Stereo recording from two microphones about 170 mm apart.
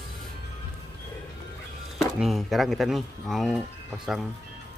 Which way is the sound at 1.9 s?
Centre (ahead or behind).